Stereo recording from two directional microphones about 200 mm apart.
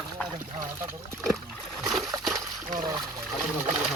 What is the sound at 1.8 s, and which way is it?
Splash, centre (ahead or behind).